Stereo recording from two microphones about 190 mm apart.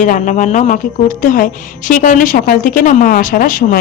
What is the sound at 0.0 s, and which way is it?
Speech, 40° left (ahead or behind).